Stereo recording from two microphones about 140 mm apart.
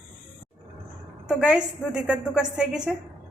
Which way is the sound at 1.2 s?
10° right (ahead or behind).